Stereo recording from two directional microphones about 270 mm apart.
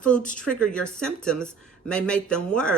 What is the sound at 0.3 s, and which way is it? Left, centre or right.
Speech, centre.